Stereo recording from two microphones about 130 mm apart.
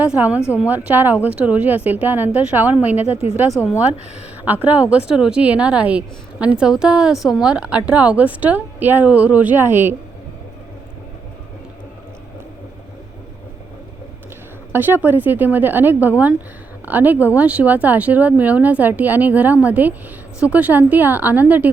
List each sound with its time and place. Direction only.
0.0 s speech: 10° right (ahead or behind)
3.1 s a woman's voice: 50° left (ahead or behind)
4.4 s speech: 15° right (ahead or behind)
14.7 s speech: 15° right (ahead or behind)